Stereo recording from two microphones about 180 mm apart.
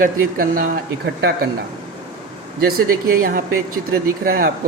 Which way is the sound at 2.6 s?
55° right (ahead or behind).